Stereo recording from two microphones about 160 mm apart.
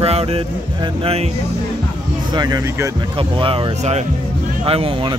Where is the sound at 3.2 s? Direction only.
35° right (ahead or behind).